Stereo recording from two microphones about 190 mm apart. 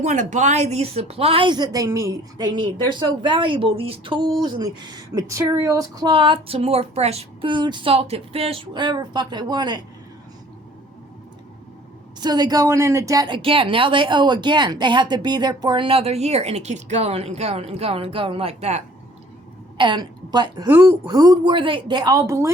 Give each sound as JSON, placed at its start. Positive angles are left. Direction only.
{"t": 0.0, "sound": "a woman's voice", "side_deg": -40}
{"t": 12.2, "sound": "a woman's voice", "side_deg": -20}
{"t": 20.7, "sound": "speech", "side_deg": -10}
{"t": 21.1, "sound": "a woman's voice", "side_deg": -20}